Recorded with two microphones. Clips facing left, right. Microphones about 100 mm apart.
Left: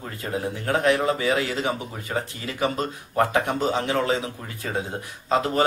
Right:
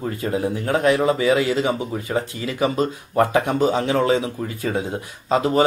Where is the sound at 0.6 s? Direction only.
15° right (ahead or behind).